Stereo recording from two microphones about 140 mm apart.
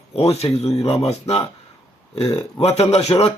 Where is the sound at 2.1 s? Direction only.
45° left (ahead or behind).